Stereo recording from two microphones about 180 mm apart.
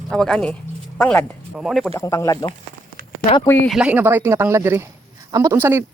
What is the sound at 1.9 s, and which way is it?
Speech, 15° left (ahead or behind).